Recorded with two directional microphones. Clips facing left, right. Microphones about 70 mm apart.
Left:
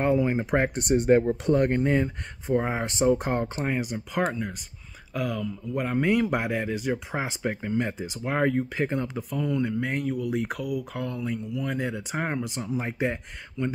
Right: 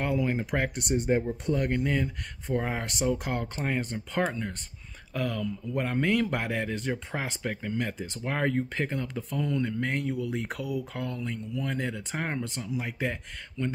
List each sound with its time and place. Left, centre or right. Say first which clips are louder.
0.0 s speech: left 5 dB; left
0.7 s speech: left 7 dB; left
1.5 s speech: left 5 dB; left
2.4 s speech: left 4 dB; centre
3.5 s speech: left 2 dB; centre
6.0 s speech: left 4 dB; centre
12.6 s speech: left 4 dB; left
13.0 s speech: left 4 dB; left